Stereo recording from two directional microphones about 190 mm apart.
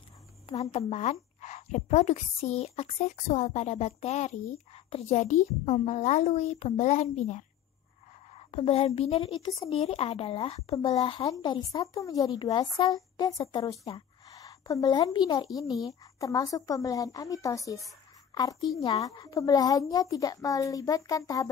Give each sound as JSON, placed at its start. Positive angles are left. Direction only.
{"t": 0.5, "sound": "a woman's voice", "side_deg": 30}